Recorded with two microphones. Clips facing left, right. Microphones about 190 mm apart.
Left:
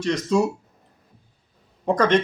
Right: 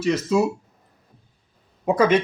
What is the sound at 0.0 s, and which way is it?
Speech, 5° right (ahead or behind).